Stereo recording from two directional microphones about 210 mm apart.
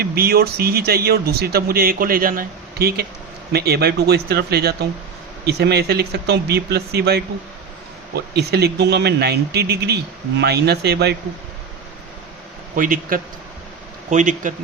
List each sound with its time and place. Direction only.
0.0 s speech: 45° right (ahead or behind)
12.7 s a man's voice: 40° right (ahead or behind)